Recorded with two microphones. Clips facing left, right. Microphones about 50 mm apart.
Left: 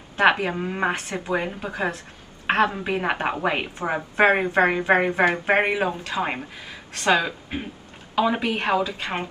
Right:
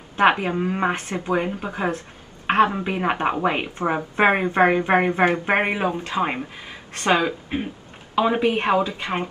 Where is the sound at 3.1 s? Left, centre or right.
Centre.